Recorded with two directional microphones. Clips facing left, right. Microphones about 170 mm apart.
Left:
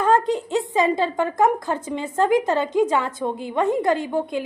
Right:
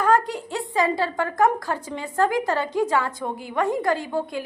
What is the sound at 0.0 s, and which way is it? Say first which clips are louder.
A woman's voice: left 2 dB; 25° left (ahead or behind).